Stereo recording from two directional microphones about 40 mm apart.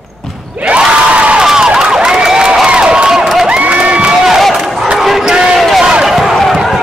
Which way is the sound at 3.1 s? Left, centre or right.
Centre.